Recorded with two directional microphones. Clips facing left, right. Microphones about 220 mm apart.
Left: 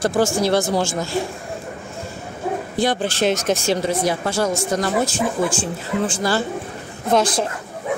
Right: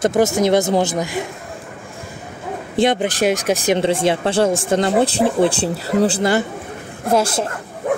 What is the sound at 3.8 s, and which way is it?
A man's voice, 30° right (ahead or behind).